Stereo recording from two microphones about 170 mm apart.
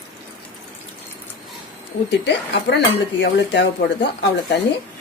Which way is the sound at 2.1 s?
90° left.